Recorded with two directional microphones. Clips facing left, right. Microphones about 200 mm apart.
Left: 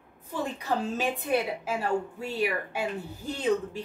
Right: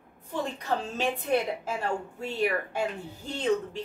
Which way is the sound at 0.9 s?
10° left (ahead or behind).